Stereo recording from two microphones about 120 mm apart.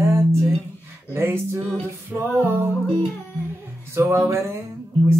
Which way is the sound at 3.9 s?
20° right (ahead or behind).